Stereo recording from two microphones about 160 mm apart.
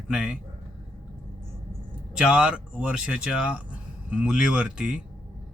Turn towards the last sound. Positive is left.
turn(degrees=-5)  # may be behind; listen again after turning